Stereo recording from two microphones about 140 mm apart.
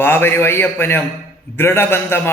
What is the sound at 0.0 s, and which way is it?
A man's voice, 15° left (ahead or behind).